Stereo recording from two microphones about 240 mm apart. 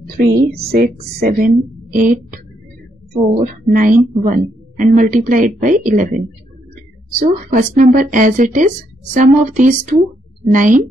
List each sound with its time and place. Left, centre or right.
0.2 s a woman's voice: right
3.6 s a woman's voice: right